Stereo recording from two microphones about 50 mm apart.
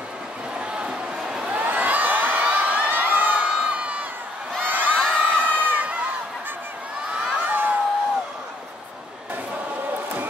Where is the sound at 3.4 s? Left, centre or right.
Right.